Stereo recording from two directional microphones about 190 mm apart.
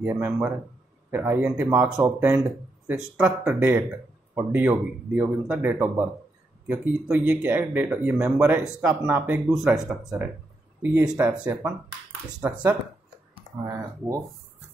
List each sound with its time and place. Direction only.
0.0 s speech: 10° right (ahead or behind)